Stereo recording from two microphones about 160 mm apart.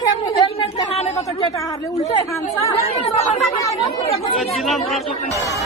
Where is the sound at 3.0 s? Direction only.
40° left (ahead or behind).